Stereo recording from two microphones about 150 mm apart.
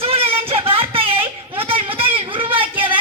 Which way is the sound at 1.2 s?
15° right (ahead or behind).